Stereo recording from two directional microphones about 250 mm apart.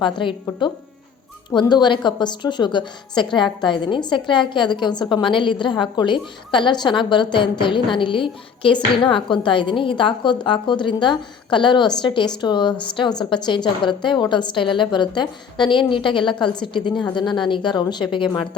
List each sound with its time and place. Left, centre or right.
0.0 s a woman's voice: centre